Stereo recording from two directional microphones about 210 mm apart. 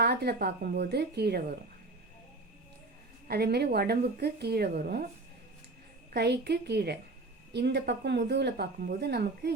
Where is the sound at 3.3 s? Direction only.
50° right (ahead or behind).